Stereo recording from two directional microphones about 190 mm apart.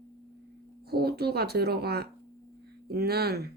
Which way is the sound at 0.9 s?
55° right (ahead or behind).